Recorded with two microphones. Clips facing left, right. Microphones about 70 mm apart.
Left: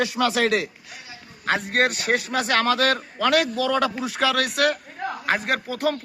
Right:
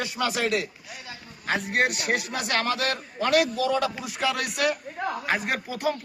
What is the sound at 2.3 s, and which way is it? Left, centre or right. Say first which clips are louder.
Speech: left 5 dB; left.